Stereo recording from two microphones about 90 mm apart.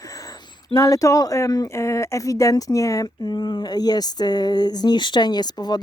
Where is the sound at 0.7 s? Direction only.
40° left (ahead or behind).